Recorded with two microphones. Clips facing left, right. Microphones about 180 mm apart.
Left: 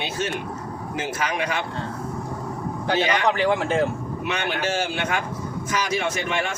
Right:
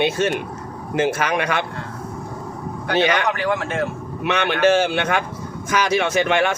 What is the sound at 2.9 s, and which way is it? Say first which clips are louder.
Speech: right 4 dB; 65° right (ahead or behind).